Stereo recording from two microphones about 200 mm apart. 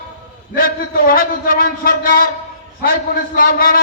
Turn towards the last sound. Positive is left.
turn(degrees=45)  # may be behind; listen again after turning